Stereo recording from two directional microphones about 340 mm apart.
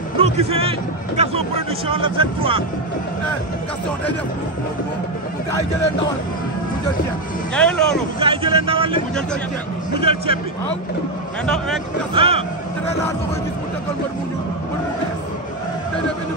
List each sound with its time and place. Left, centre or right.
0.2 s speech: centre
7.5 s speech: centre
8.2 s speech: centre
11.4 s speech: centre
12.1 s speech: centre